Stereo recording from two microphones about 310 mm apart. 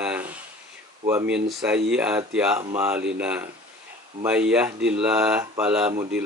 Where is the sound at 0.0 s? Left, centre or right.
Centre.